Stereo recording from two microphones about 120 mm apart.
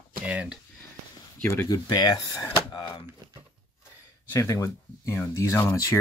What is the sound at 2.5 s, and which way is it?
Drawer open or close, 35° left (ahead or behind).